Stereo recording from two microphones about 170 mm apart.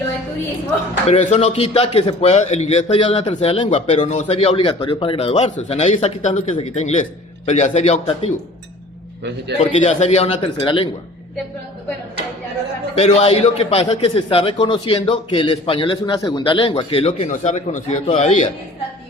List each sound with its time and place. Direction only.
1.0 s a man's voice: 40° left (ahead or behind)
9.6 s a man's voice: 40° left (ahead or behind)
13.0 s a man's voice: 35° left (ahead or behind)